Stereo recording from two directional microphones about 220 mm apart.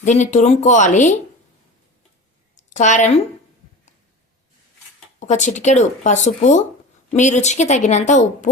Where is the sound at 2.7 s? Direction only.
35° left (ahead or behind).